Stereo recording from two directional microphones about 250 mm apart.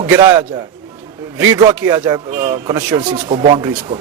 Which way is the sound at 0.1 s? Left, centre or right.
Centre.